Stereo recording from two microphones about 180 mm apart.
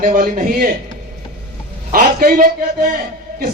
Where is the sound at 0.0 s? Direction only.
50° right (ahead or behind).